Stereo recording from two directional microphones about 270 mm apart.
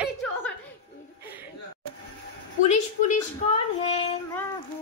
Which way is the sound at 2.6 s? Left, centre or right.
Left.